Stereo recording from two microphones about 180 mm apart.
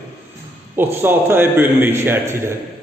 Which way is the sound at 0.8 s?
10° right (ahead or behind).